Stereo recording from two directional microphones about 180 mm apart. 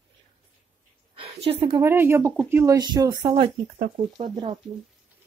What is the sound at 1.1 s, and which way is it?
Speech, 30° right (ahead or behind).